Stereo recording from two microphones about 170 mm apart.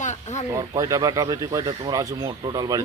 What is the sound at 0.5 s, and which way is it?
Speech, 20° right (ahead or behind).